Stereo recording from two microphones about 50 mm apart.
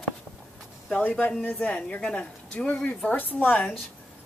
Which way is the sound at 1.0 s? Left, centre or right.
Left.